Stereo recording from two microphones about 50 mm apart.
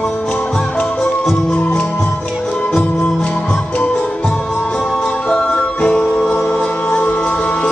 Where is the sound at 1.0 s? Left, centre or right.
Centre.